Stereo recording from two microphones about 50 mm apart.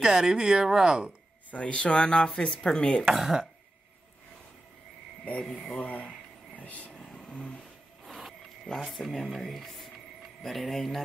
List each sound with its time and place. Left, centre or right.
0.0 s speech: centre
1.5 s speech: left
3.1 s speech: centre
5.8 s speech: left
8.0 s a sound: centre
8.8 s speech: centre